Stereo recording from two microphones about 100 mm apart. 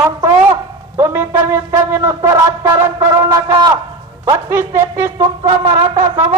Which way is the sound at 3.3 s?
45° right (ahead or behind).